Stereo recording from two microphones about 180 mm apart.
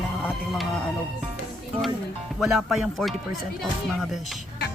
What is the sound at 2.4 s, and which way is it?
Speech, centre (ahead or behind).